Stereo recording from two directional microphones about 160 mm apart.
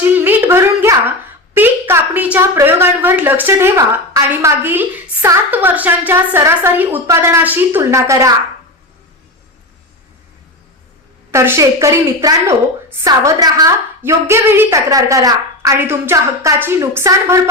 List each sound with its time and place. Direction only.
0.0 s a sound: 10° right (ahead or behind)
1.5 s a woman's voice: 10° right (ahead or behind)
11.3 s a woman's voice: 15° right (ahead or behind)